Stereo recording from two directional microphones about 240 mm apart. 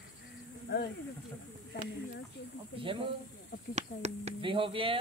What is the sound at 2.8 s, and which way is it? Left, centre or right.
Speech, right.